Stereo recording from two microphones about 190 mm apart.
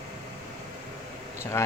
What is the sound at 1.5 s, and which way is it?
Speech, 15° left (ahead or behind).